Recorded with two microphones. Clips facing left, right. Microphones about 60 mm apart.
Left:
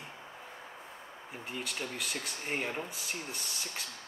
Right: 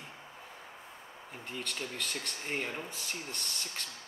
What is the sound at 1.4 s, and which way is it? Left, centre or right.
Speech, centre.